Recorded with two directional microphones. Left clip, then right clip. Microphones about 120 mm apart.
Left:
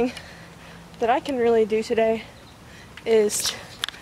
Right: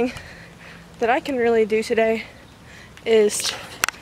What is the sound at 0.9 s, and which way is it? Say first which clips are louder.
Speech: right 2 dB; 10° right (ahead or behind).